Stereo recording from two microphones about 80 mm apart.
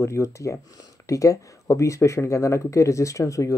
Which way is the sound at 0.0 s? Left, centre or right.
Left.